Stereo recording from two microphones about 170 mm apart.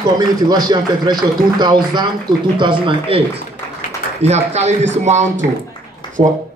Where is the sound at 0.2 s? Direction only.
25° right (ahead or behind).